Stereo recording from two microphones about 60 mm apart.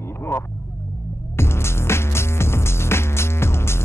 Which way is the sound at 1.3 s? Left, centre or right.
Left.